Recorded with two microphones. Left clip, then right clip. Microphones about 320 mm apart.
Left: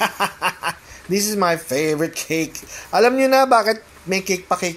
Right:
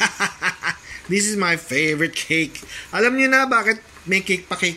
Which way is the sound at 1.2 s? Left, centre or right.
Left.